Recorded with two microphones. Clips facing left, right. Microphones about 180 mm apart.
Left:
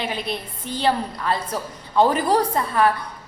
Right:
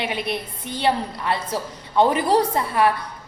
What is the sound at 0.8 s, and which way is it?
A woman's voice, 20° right (ahead or behind).